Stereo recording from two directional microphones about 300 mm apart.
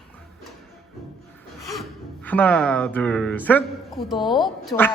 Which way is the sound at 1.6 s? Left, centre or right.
Centre.